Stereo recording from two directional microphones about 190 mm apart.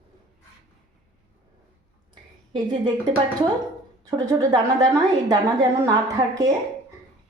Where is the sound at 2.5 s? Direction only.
25° right (ahead or behind).